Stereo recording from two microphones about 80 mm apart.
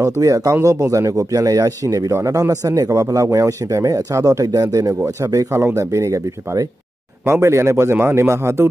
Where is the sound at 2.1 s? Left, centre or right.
Right.